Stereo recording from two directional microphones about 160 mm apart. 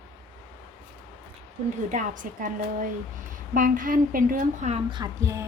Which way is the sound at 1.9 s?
55° right (ahead or behind).